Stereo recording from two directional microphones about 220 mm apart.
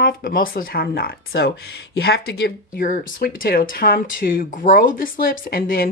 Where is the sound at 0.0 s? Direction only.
40° left (ahead or behind).